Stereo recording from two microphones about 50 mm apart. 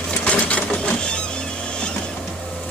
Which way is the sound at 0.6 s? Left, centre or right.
Left.